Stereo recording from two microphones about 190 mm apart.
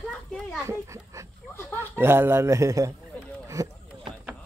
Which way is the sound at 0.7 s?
15° right (ahead or behind).